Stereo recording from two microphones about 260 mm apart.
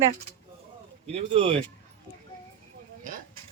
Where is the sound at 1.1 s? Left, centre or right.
Right.